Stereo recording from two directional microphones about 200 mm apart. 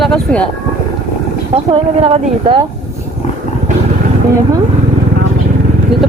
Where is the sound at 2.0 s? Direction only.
30° right (ahead or behind).